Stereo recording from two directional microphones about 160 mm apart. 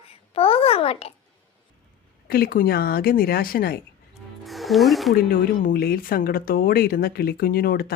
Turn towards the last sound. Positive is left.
turn(degrees=70)  # may be behind; listen again after turning